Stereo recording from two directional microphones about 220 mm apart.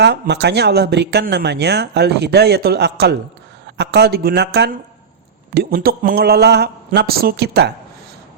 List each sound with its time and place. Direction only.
0.0 s speech: 50° right (ahead or behind)